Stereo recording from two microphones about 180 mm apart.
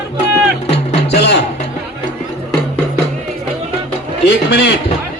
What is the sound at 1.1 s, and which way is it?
Music, 70° left (ahead or behind).